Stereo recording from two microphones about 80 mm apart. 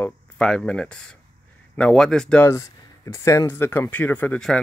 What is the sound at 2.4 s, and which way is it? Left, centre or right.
Speech, left.